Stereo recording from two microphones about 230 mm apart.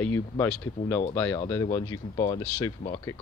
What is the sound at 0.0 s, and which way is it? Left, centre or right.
Speech, centre.